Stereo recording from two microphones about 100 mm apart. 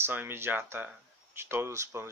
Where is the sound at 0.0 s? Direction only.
20° right (ahead or behind).